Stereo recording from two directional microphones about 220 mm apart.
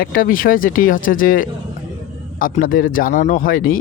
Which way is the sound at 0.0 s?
40° left (ahead or behind).